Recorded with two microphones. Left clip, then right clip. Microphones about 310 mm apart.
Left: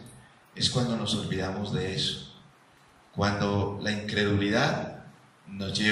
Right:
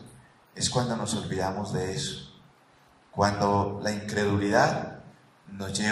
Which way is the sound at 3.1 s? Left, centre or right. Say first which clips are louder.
Right 4 dB; right.